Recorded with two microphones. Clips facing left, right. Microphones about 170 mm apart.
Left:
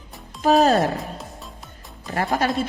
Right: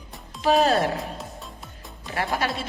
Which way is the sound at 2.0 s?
45° left (ahead or behind).